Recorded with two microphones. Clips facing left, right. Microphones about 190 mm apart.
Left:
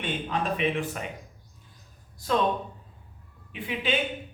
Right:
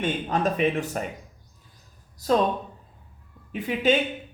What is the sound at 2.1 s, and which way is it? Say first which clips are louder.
Speech: right 5 dB; 40° right (ahead or behind).